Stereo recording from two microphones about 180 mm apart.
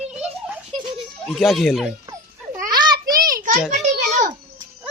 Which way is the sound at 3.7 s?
40° right (ahead or behind).